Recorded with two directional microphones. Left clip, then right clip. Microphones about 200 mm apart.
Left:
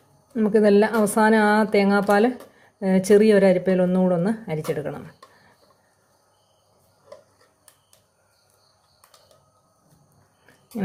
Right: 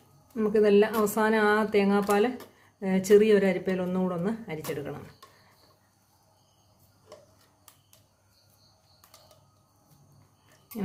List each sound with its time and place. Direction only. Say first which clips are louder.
0.3 s speech: left 4 dB; 25° left (ahead or behind)